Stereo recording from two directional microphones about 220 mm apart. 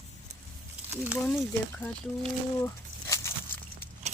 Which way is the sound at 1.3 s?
5° left (ahead or behind).